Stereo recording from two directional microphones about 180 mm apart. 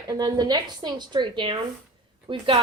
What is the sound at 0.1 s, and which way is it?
A woman's voice, 25° right (ahead or behind).